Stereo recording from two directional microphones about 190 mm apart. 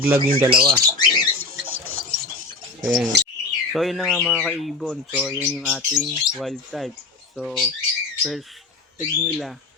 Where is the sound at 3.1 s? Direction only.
60° right (ahead or behind).